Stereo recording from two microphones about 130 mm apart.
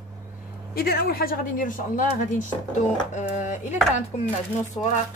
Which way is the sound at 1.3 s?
90° left.